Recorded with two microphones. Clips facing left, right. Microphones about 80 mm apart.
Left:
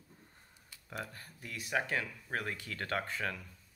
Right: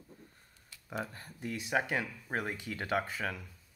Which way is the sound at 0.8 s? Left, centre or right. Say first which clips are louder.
Right 4 dB; right.